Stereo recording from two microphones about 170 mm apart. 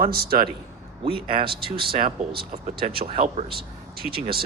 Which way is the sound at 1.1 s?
30° right (ahead or behind).